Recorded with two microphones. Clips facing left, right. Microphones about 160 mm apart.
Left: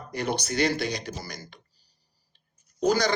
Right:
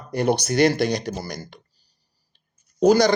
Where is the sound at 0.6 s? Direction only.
75° right (ahead or behind).